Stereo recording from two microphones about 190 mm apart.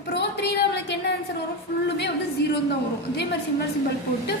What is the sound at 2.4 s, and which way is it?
Speech, 60° left (ahead or behind).